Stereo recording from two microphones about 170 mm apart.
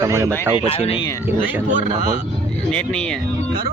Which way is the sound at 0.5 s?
35° left (ahead or behind).